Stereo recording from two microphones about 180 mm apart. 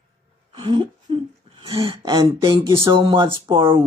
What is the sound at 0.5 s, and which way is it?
Speech, 25° right (ahead or behind).